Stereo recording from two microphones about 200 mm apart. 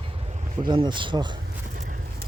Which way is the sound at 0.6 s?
20° right (ahead or behind).